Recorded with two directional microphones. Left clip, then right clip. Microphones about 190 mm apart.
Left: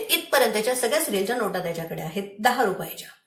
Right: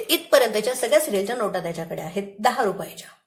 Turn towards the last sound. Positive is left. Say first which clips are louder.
# even
turn(degrees=-45)  # may be behind; listen again after turning